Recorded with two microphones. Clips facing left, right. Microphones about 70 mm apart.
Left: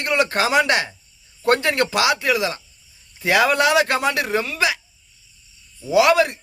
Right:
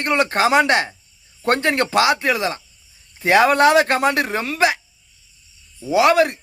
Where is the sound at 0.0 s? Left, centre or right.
Right.